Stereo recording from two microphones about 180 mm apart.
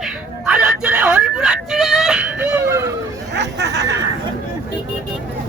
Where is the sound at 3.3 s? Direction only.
70° right (ahead or behind).